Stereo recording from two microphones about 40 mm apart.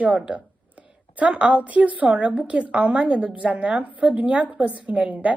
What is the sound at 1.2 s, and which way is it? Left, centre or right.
A woman's voice, right.